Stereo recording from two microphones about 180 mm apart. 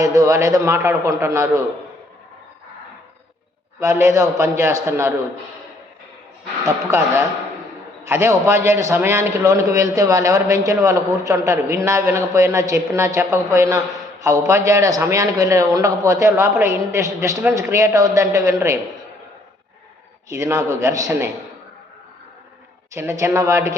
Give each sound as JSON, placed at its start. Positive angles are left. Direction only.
{"t": 0.0, "sound": "a man's voice", "side_deg": -20}
{"t": 3.8, "sound": "a man's voice", "side_deg": -15}
{"t": 8.0, "sound": "a man's voice", "side_deg": -15}
{"t": 20.3, "sound": "a man's voice", "side_deg": -15}
{"t": 23.0, "sound": "a man's voice", "side_deg": -15}